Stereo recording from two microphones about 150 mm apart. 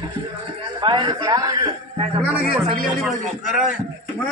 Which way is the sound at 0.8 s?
30° right (ahead or behind).